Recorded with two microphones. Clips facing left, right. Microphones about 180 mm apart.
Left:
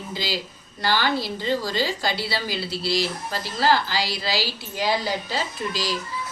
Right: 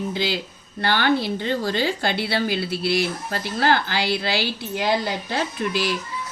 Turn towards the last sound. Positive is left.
turn(degrees=-60)  # may be behind; listen again after turning